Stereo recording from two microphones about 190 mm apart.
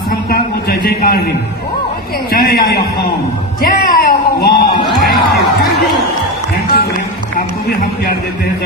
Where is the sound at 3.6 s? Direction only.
50° left (ahead or behind).